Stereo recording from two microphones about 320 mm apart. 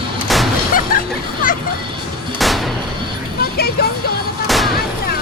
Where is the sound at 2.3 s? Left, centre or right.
Centre.